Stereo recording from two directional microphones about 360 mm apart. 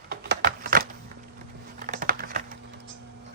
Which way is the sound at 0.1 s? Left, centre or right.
Right.